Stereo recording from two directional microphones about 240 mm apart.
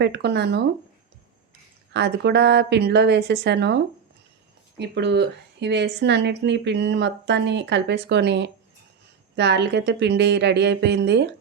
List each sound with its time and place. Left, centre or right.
0.0 s a woman's voice: right
1.9 s a woman's voice: right